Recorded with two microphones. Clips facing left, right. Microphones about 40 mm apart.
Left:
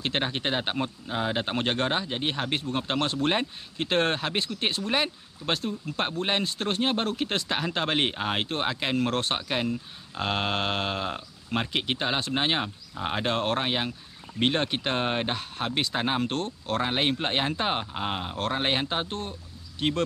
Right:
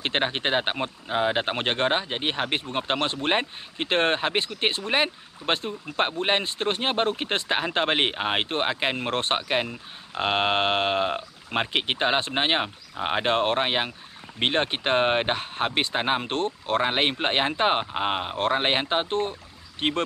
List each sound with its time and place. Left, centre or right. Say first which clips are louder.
0.0 s speech: right 3 dB; right